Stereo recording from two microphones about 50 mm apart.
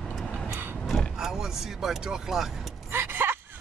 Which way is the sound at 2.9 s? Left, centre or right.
Right.